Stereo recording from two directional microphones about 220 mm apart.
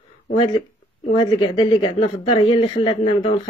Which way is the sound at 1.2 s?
20° left (ahead or behind).